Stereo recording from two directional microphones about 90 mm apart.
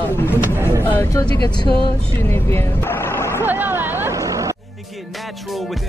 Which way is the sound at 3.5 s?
25° right (ahead or behind).